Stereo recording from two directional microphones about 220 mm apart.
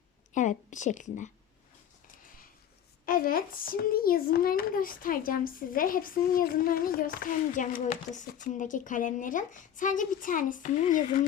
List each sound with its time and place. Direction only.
0.3 s a child's voice: 35° left (ahead or behind)
3.1 s a child's voice: 40° left (ahead or behind)